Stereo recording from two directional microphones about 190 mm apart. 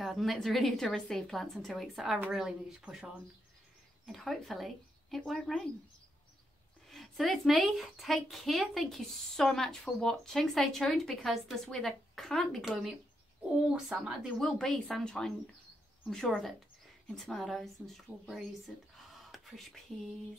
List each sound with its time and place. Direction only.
0.0 s a woman's voice: centre (ahead or behind)
6.9 s a woman's voice: centre (ahead or behind)
18.9 s whispering: centre (ahead or behind)